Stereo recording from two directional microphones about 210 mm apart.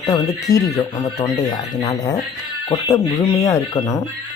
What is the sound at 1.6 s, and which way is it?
Speech, 30° left (ahead or behind).